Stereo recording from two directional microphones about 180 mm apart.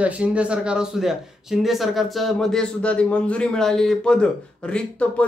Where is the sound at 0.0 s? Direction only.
5° right (ahead or behind).